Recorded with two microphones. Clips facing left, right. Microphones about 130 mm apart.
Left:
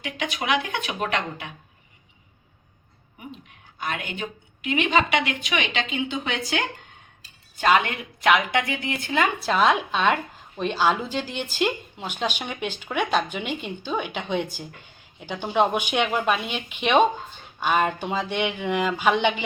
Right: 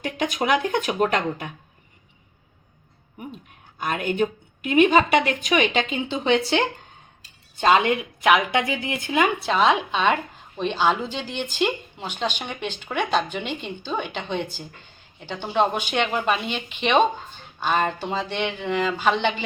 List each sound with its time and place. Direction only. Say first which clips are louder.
0.0 s speech: right 5 dB; 45° right (ahead or behind)
3.8 s a woman's voice: right 7 dB; 45° right (ahead or behind); by 9.3 s 15° right (ahead or behind)
9.5 s speech: right 1 dB; centre (ahead or behind)